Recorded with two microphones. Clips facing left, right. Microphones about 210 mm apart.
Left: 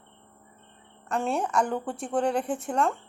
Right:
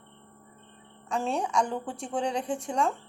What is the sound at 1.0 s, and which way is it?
A woman's voice, centre (ahead or behind).